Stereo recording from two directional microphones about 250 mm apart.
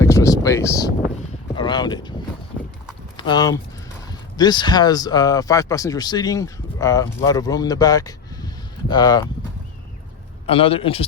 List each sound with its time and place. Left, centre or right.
0.0 s a sound: centre
1.5 s speech: centre
3.2 s speech: centre
10.4 s a man's voice: left